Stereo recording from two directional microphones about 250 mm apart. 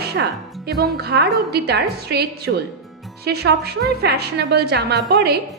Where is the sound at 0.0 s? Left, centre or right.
Right.